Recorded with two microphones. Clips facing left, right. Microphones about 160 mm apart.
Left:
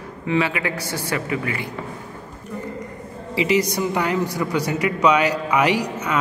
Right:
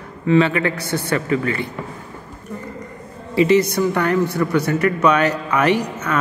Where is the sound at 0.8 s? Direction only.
60° right (ahead or behind).